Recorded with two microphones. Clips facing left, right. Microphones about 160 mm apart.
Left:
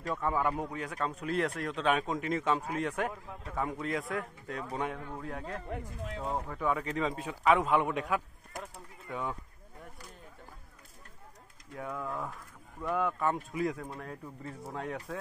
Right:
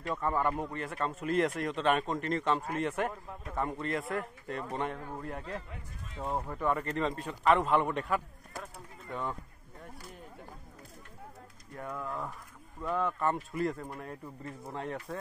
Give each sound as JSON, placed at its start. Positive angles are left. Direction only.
{"t": 0.0, "sound": "speech", "side_deg": 5}
{"t": 5.7, "sound": "speech", "side_deg": 90}
{"t": 6.5, "sound": "speech", "side_deg": 0}
{"t": 11.7, "sound": "speech", "side_deg": 0}